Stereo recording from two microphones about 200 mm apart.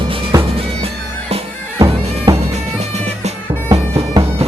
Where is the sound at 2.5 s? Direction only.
35° right (ahead or behind).